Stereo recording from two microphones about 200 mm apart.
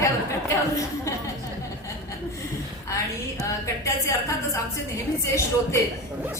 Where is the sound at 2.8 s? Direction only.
15° left (ahead or behind).